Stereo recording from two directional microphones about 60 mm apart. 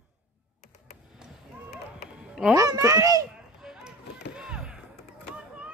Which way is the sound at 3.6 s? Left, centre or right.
Centre.